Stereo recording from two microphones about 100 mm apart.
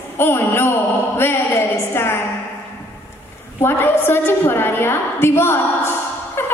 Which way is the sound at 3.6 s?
25° left (ahead or behind).